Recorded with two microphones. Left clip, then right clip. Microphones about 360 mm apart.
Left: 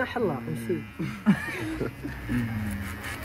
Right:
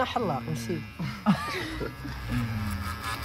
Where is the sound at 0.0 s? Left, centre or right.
Centre.